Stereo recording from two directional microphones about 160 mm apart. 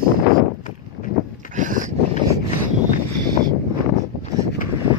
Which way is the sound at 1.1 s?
65° left (ahead or behind).